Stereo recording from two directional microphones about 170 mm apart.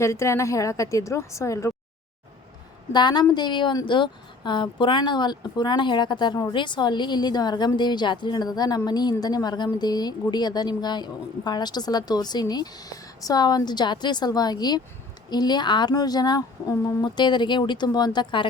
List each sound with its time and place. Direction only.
0.0 s a woman's voice: 15° left (ahead or behind)
2.9 s a woman's voice: 25° left (ahead or behind)